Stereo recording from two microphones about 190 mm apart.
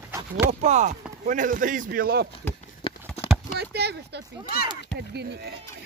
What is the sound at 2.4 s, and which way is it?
Speech, 10° left (ahead or behind).